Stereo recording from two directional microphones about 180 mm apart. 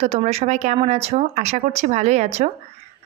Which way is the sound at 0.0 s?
35° right (ahead or behind).